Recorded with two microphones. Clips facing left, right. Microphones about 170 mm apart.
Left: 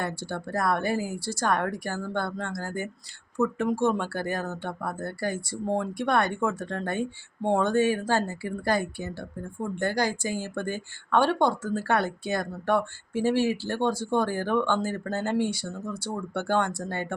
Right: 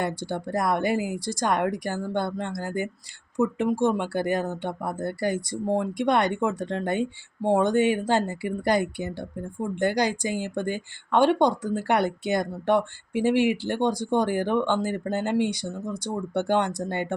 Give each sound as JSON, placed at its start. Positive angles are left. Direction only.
{"t": 0.2, "sound": "speech", "side_deg": -15}